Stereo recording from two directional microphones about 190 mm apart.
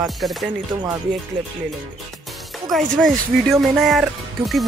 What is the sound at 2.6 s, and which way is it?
Speech, centre (ahead or behind).